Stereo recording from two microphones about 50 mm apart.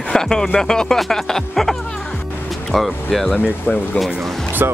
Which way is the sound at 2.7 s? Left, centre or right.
Centre.